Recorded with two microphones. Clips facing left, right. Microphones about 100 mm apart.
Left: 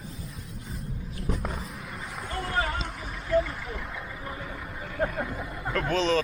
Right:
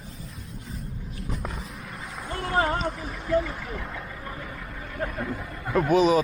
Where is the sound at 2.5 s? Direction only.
35° right (ahead or behind).